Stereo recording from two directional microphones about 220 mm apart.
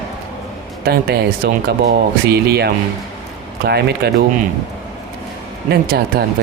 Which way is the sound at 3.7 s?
45° right (ahead or behind).